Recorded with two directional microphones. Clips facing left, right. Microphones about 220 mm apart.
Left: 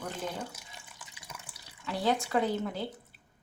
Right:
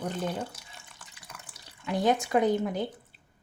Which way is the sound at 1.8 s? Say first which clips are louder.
Right 4 dB; 20° right (ahead or behind).